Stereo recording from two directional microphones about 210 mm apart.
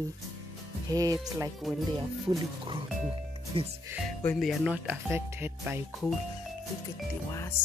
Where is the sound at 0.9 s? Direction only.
15° right (ahead or behind).